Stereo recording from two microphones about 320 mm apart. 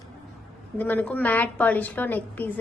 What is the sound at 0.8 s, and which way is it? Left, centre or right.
A woman's voice, centre.